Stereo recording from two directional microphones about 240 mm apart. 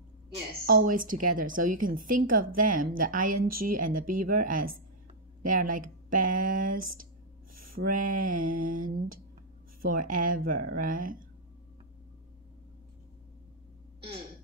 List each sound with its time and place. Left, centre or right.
0.7 s a woman's voice: right
3.3 s speech: right
3.6 s a woman's voice: right